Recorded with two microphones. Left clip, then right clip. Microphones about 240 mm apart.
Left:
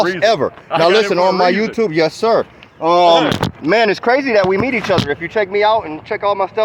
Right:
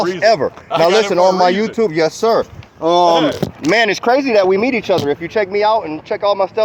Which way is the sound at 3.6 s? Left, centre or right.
Centre.